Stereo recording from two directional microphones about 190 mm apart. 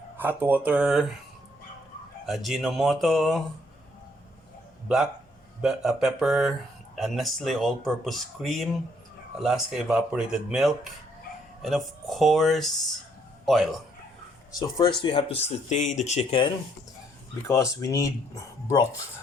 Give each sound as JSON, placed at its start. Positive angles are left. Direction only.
{"t": 0.2, "sound": "speech", "side_deg": -10}
{"t": 2.2, "sound": "speech", "side_deg": 0}
{"t": 5.6, "sound": "a man's voice", "side_deg": -5}
{"t": 14.5, "sound": "speech", "side_deg": 25}
{"t": 17.5, "sound": "speech", "side_deg": 15}